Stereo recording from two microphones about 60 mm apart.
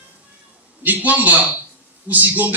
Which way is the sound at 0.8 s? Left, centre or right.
Right.